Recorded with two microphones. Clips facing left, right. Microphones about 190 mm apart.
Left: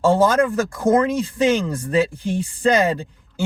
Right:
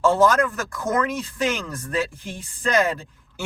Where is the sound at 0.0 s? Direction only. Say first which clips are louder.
Left 2 dB; 30° left (ahead or behind).